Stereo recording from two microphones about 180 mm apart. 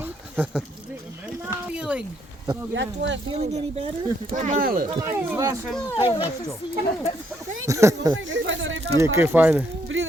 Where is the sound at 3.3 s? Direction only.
35° right (ahead or behind); by 4.8 s 50° right (ahead or behind).